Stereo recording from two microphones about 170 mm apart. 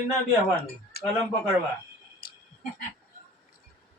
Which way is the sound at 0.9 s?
70° left (ahead or behind).